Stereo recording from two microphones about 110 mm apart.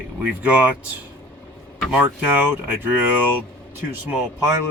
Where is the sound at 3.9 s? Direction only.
15° right (ahead or behind).